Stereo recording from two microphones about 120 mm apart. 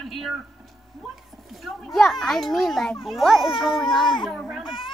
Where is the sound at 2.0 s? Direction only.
Centre (ahead or behind).